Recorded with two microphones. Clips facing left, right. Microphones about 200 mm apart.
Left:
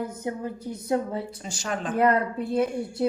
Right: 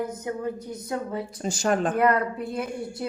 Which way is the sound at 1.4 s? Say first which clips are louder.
Right 12 dB; 45° right (ahead or behind).